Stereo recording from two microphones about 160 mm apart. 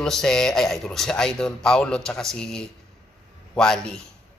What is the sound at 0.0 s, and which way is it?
A man's voice, 5° left (ahead or behind).